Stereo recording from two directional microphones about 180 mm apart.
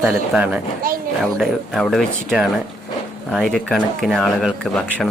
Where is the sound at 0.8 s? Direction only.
50° right (ahead or behind).